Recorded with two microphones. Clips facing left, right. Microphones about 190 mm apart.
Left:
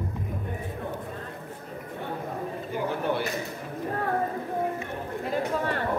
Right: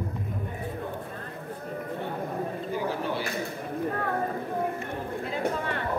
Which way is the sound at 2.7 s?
55° left (ahead or behind).